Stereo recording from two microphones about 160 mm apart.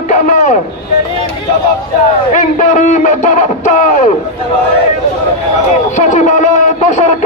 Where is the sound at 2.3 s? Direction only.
55° left (ahead or behind).